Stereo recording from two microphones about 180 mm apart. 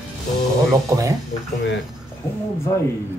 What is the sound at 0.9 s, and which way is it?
Speech, 20° right (ahead or behind).